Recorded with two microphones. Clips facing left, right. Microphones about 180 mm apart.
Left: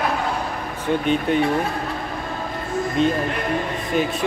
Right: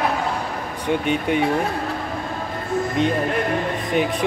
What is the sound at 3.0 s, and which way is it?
Speech, 15° right (ahead or behind).